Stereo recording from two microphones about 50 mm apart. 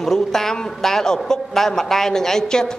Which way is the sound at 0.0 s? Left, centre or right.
Centre.